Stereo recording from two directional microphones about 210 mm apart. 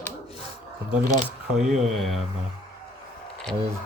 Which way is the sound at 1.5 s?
Centre (ahead or behind).